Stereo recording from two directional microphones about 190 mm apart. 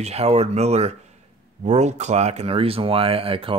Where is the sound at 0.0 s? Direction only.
35° right (ahead or behind).